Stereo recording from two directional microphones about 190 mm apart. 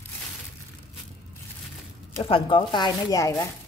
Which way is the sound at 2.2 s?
25° left (ahead or behind).